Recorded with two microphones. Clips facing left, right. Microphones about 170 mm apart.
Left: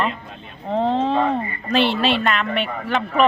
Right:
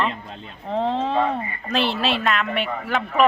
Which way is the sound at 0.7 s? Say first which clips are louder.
Left 3 dB; centre (ahead or behind).